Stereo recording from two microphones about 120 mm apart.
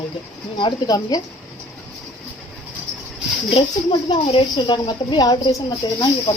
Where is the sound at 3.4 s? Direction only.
50° left (ahead or behind).